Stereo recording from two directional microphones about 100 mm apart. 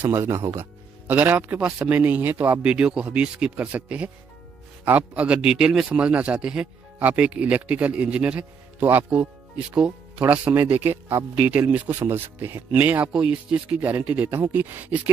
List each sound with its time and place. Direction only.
0.0 s a man's voice: 25° right (ahead or behind)